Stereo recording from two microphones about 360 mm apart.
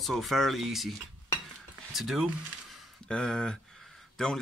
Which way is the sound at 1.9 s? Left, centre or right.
Centre.